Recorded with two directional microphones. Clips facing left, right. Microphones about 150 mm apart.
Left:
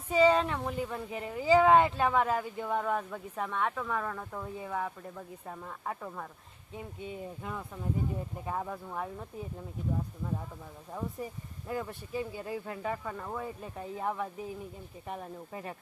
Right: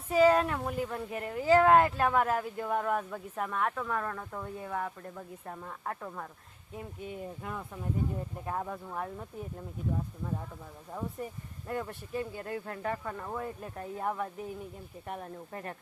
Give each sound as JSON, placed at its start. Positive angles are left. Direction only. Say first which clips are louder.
{"t": 0.1, "sound": "speech", "louder": "right 1 dB", "side_deg": -5}
{"t": 11.2, "sound": "speech", "louder": "even", "side_deg": 0}